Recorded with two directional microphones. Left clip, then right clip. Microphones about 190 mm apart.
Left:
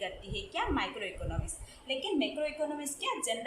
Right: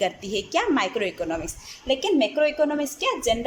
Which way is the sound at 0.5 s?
55° right (ahead or behind).